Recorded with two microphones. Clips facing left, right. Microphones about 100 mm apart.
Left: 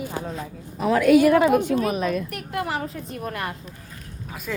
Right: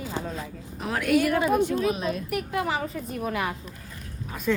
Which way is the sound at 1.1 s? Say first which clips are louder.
Left 5 dB; 90° left.